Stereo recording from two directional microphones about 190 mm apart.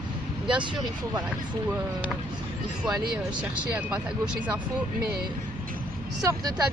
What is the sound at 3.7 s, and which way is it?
Speech, 5° right (ahead or behind).